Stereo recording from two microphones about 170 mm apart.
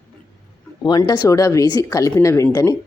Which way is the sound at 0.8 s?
25° left (ahead or behind).